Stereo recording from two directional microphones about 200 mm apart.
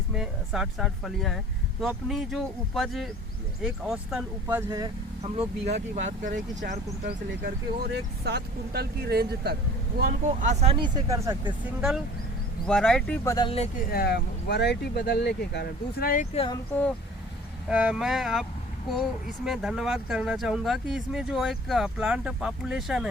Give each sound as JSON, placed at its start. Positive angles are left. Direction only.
{"t": 0.1, "sound": "speech", "side_deg": -5}
{"t": 4.4, "sound": "speech", "side_deg": -15}
{"t": 5.2, "sound": "speech", "side_deg": -30}
{"t": 7.4, "sound": "speech", "side_deg": -55}
{"t": 10.0, "sound": "speech", "side_deg": -35}
{"t": 12.6, "sound": "speech", "side_deg": 5}
{"t": 13.2, "sound": "speech", "side_deg": 20}
{"t": 13.7, "sound": "speech", "side_deg": 50}
{"t": 16.3, "sound": "speech", "side_deg": 30}
{"t": 17.7, "sound": "speech", "side_deg": -5}
{"t": 19.5, "sound": "speech", "side_deg": 0}